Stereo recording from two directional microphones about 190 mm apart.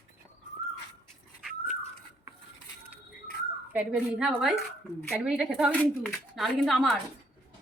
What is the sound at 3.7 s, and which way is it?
A woman's voice, 5° right (ahead or behind).